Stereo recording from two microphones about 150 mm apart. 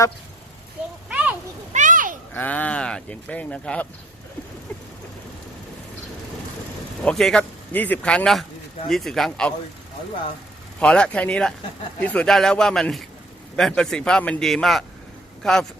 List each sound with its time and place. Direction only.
1.1 s a sound: 10° right (ahead or behind)
1.7 s children playing: 55° right (ahead or behind)
2.3 s speech: 10° left (ahead or behind)
7.0 s speech: 5° left (ahead or behind)
10.8 s speech: 5° left (ahead or behind)